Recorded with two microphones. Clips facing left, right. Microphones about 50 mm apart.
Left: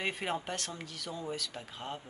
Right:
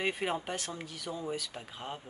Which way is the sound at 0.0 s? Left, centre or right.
Centre.